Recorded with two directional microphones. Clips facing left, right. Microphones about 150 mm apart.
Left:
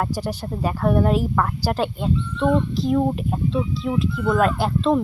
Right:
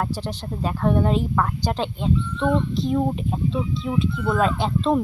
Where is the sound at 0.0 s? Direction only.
10° left (ahead or behind).